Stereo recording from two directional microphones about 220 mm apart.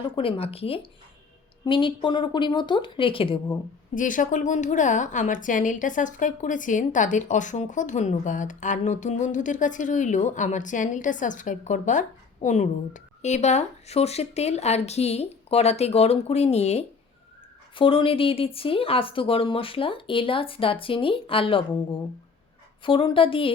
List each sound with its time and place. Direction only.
0.0 s speech: 25° left (ahead or behind)
3.9 s a woman's voice: 35° left (ahead or behind)